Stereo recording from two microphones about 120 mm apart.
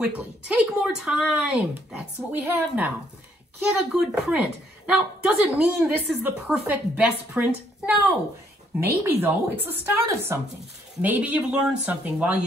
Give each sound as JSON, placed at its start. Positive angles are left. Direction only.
{"t": 0.0, "sound": "speech", "side_deg": -5}
{"t": 2.3, "sound": "a woman's voice", "side_deg": -15}
{"t": 3.5, "sound": "a woman's voice", "side_deg": -5}